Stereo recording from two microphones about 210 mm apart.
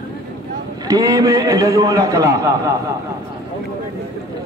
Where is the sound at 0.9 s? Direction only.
15° right (ahead or behind).